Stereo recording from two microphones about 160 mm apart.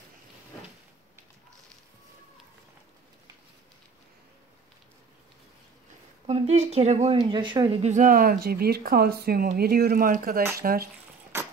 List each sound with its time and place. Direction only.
6.2 s a woman's voice: 40° right (ahead or behind)
7.2 s speech: 30° right (ahead or behind)
7.8 s speech: 50° right (ahead or behind); by 10.9 s 70° right (ahead or behind)